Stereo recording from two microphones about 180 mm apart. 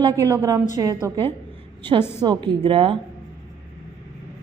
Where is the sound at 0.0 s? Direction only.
15° right (ahead or behind).